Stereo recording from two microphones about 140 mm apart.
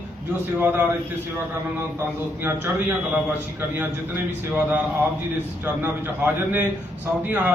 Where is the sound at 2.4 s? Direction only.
15° right (ahead or behind).